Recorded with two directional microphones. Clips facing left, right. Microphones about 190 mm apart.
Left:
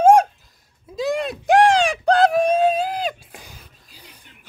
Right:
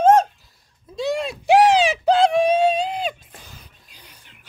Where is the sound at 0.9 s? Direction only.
Centre (ahead or behind).